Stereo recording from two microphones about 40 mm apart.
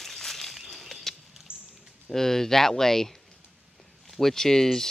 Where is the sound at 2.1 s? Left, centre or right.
Centre.